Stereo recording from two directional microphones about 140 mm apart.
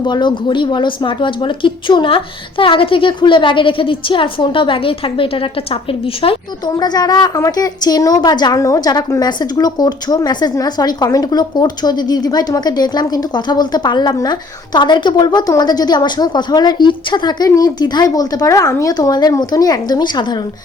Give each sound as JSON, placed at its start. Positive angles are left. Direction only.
{"t": 0.0, "sound": "a woman's voice", "side_deg": 35}
{"t": 6.7, "sound": "a woman's voice", "side_deg": 30}